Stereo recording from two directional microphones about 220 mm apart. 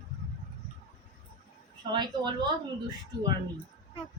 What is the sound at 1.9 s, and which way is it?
Speech, 20° right (ahead or behind).